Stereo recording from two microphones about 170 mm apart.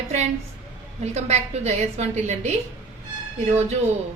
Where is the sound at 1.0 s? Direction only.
40° right (ahead or behind).